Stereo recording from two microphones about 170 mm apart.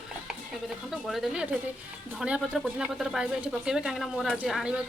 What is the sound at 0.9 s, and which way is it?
Speech, centre (ahead or behind).